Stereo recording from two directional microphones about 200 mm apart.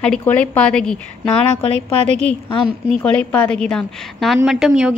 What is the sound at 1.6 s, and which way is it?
Speech, 30° left (ahead or behind).